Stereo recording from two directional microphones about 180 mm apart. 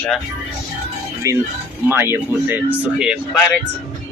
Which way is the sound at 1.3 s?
15° right (ahead or behind).